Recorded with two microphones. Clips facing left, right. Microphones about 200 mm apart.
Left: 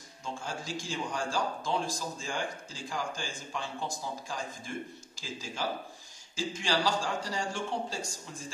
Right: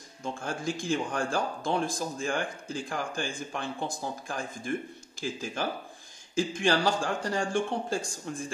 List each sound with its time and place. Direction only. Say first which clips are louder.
0.2 s speech: right 5 dB; 55° right (ahead or behind)